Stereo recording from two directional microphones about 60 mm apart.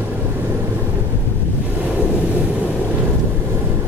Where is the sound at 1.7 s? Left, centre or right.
Right.